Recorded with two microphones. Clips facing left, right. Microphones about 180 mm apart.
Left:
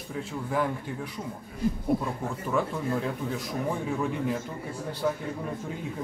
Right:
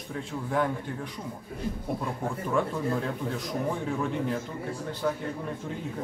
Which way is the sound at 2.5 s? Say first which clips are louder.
Even; 5° left (ahead or behind).